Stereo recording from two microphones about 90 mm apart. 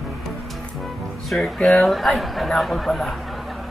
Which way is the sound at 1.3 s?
5° left (ahead or behind).